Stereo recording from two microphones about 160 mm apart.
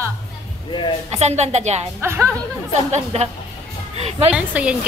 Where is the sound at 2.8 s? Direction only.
45° right (ahead or behind).